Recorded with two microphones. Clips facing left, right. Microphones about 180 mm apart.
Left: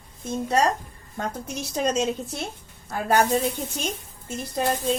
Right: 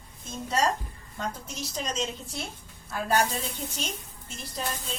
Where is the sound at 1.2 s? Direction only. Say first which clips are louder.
Left 4 dB; 50° left (ahead or behind).